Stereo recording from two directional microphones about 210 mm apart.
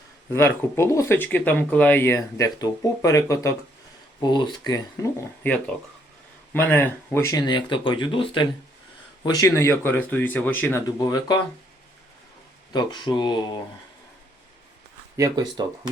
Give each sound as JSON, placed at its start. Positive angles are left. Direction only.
{"t": 0.3, "sound": "speech", "side_deg": 10}
{"t": 5.4, "sound": "speech", "side_deg": 5}
{"t": 12.7, "sound": "speech", "side_deg": 20}
{"t": 15.1, "sound": "speech", "side_deg": -15}